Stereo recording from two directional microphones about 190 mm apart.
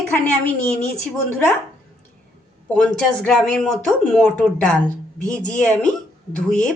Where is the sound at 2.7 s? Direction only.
5° left (ahead or behind).